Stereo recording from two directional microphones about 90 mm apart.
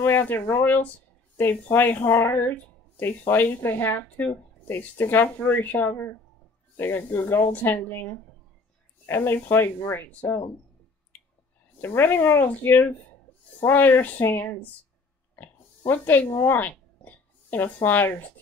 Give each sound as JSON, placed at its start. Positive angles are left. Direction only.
{"t": 0.0, "sound": "speech", "side_deg": 25}
{"t": 11.8, "sound": "speech", "side_deg": 25}
{"t": 15.3, "sound": "oink", "side_deg": 25}